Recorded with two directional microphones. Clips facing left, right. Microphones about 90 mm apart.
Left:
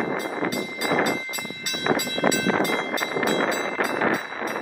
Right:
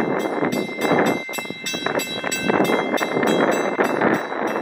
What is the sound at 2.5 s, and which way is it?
Vehicle, 40° right (ahead or behind).